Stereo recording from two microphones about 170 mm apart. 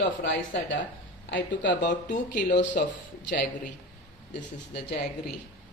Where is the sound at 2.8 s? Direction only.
60° left (ahead or behind).